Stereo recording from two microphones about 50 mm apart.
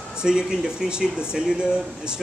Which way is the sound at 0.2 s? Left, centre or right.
Centre.